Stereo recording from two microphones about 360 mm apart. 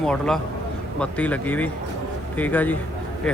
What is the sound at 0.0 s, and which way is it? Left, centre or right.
Speech, centre.